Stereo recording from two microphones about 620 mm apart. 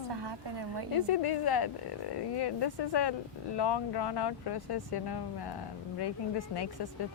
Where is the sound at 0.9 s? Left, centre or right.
Left.